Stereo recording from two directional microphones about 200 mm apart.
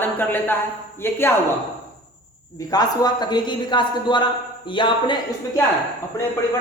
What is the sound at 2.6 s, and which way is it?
A man's voice, 20° left (ahead or behind).